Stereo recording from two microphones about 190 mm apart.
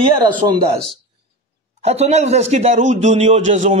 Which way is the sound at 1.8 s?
35° right (ahead or behind).